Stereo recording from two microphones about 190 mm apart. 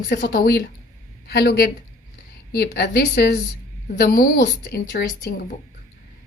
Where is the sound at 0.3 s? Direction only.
60° left (ahead or behind).